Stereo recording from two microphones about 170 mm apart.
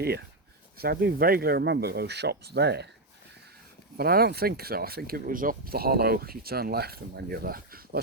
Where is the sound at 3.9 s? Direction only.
65° right (ahead or behind).